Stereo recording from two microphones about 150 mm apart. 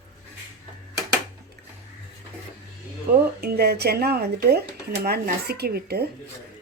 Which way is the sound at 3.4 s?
90° right.